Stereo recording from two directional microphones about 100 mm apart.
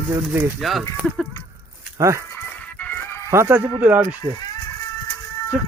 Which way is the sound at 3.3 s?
25° right (ahead or behind).